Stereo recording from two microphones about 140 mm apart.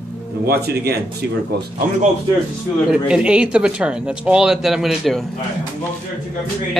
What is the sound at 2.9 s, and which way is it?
Speech, 5° right (ahead or behind).